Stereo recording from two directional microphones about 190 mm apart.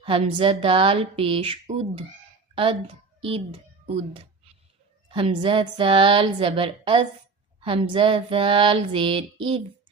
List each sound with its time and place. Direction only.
0.0 s a woman's voice: 30° right (ahead or behind)